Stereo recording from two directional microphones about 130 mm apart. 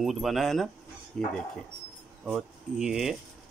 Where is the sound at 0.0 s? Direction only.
Centre (ahead or behind).